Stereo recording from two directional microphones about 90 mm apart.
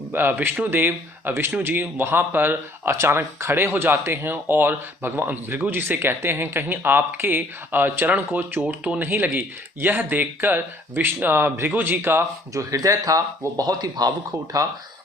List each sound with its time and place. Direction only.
0.1 s speech: 20° right (ahead or behind)
12.7 s speech: 40° right (ahead or behind)